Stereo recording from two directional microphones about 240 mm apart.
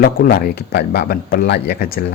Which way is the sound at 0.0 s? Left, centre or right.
Left.